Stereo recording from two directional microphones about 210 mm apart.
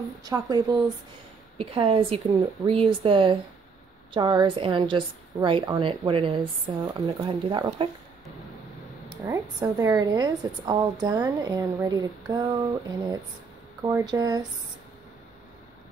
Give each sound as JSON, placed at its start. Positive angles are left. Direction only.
{"t": 0.2, "sound": "a woman's voice", "side_deg": -15}
{"t": 9.1, "sound": "a woman's voice", "side_deg": -15}